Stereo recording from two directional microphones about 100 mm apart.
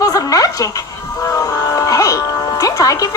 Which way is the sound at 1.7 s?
35° left (ahead or behind).